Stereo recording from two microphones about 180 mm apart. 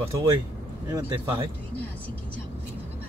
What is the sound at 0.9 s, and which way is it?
Speech, 25° right (ahead or behind).